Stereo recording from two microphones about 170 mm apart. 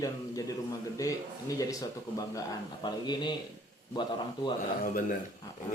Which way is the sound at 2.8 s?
25° left (ahead or behind).